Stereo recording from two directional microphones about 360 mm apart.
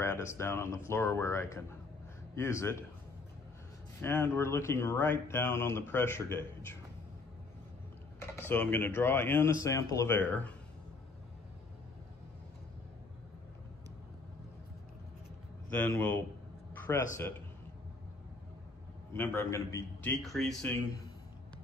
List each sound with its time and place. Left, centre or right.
0.0 s speech: centre
4.0 s speech: centre
8.4 s speech: centre
15.7 s a man's voice: centre
19.1 s a man's voice: centre